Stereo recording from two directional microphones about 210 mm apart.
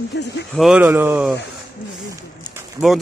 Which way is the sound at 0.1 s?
55° left (ahead or behind).